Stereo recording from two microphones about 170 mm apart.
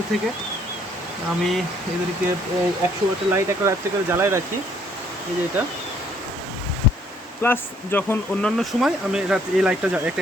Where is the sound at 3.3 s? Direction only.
15° right (ahead or behind).